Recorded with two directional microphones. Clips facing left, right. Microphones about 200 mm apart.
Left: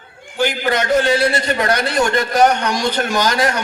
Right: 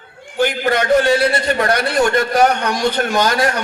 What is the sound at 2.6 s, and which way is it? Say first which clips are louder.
Speech: right 1 dB; 55° right (ahead or behind).